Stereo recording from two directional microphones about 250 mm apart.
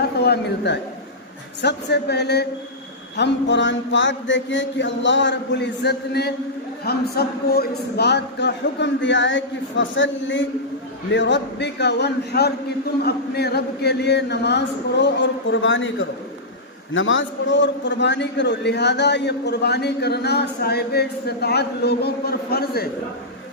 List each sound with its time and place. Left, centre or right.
0.2 s a man's voice: left